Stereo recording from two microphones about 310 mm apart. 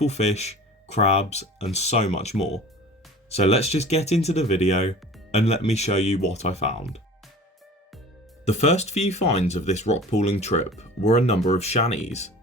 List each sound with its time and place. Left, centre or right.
0.0 s speech: left
8.4 s speech: left